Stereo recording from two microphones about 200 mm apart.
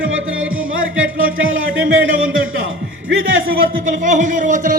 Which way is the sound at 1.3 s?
80° right.